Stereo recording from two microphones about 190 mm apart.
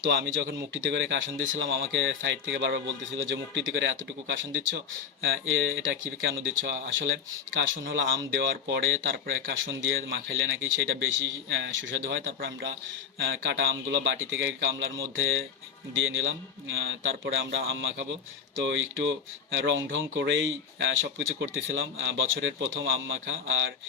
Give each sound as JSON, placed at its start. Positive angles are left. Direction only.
{"t": 0.1, "sound": "speech", "side_deg": -75}
{"t": 5.2, "sound": "speech", "side_deg": -85}
{"t": 13.1, "sound": "speech", "side_deg": -75}